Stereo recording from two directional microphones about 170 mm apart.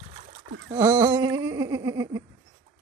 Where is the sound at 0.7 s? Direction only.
20° right (ahead or behind).